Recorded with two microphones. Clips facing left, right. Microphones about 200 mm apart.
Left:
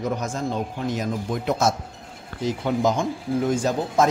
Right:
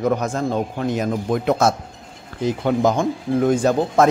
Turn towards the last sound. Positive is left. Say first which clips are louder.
# right 5 dB
turn(degrees=-60)  # may be behind; listen again after turning